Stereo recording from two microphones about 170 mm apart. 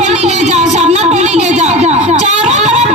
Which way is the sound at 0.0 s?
40° right (ahead or behind).